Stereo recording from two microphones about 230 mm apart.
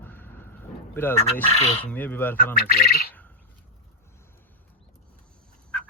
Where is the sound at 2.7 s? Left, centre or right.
Left.